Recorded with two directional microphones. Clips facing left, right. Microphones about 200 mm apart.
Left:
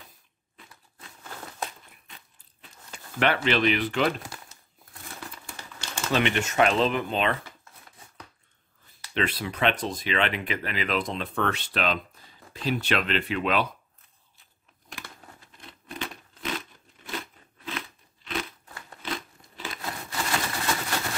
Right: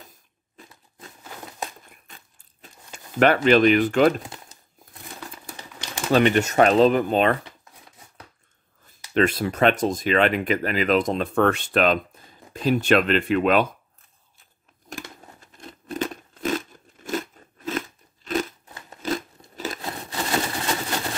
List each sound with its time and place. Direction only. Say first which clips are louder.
2.0 s a sound: right 2 dB; 45° right (ahead or behind)
3.4 s speech: right 8 dB; 45° right (ahead or behind)
5.5 s typewriter: right 3 dB; 15° right (ahead or behind)
6.1 s speech: right 6 dB; 40° right (ahead or behind)
9.1 s speech: right 8 dB; 45° right (ahead or behind)
14.9 s a sound: right 7 dB; 45° right (ahead or behind)
18.7 s scissors: right 2 dB; 20° right (ahead or behind)
19.0 s biting: right 8 dB; 40° right (ahead or behind)
19.8 s wood: right 3 dB; 25° right (ahead or behind)